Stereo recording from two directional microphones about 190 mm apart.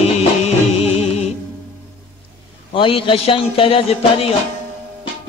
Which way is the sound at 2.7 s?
25° left (ahead or behind).